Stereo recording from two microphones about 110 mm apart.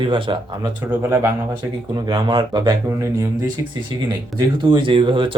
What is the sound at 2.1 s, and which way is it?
Speech, 45° right (ahead or behind).